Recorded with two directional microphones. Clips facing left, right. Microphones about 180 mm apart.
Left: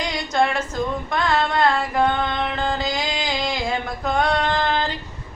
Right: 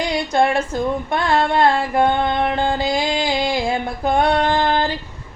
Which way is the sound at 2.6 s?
30° right (ahead or behind).